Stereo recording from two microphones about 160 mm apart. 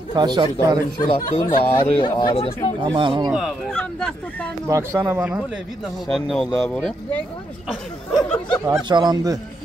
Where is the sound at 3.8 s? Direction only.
5° left (ahead or behind).